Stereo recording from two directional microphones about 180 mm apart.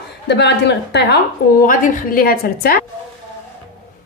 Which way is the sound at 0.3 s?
70° left (ahead or behind).